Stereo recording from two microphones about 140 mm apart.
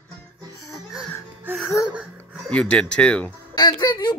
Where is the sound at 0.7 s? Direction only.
Centre (ahead or behind).